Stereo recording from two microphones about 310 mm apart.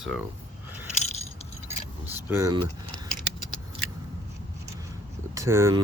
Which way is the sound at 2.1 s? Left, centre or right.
Centre.